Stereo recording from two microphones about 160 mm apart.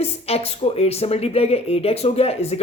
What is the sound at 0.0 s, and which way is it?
Speech, 40° left (ahead or behind).